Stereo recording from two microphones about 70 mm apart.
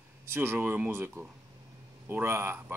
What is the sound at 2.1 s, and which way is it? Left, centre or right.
Speech, right.